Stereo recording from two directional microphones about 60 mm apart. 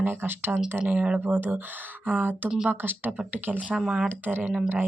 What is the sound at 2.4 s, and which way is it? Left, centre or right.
Speech, centre.